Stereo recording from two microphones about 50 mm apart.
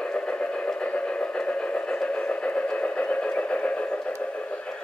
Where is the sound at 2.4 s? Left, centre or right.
Left.